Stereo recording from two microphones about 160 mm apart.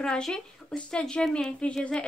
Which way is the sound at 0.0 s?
5° left (ahead or behind).